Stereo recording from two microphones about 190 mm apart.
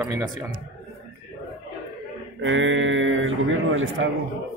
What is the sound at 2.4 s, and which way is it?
A man's voice, 80° right.